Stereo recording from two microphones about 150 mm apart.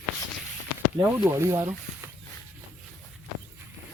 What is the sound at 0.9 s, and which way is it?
Speech, 20° right (ahead or behind).